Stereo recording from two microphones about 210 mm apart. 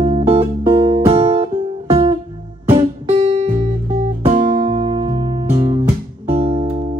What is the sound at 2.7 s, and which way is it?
Music, 25° right (ahead or behind).